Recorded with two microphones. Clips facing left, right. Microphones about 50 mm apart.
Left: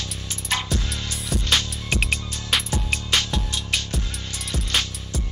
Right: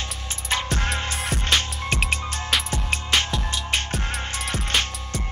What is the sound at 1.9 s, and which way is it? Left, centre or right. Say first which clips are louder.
Music: even; centre.